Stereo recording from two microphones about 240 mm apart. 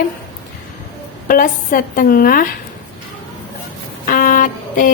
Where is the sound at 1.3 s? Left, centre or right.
Left.